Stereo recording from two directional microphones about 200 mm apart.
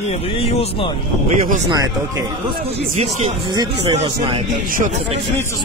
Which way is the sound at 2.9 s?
35° right (ahead or behind).